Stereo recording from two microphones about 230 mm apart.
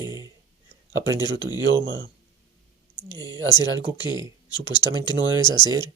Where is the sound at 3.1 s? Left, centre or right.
Centre.